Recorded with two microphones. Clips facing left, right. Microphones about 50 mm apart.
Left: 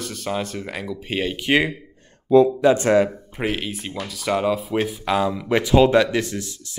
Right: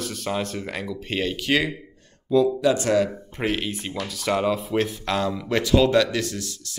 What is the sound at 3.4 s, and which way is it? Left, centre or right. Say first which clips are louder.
Speech: even; centre.